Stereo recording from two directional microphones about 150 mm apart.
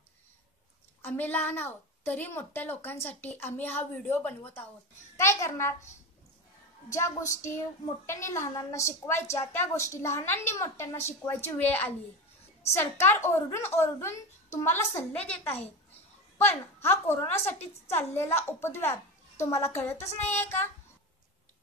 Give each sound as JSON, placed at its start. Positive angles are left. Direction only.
{"t": 1.0, "sound": "a woman's voice", "side_deg": 10}
{"t": 6.9, "sound": "a child's voice", "side_deg": 20}
{"t": 13.0, "sound": "a woman's voice", "side_deg": 15}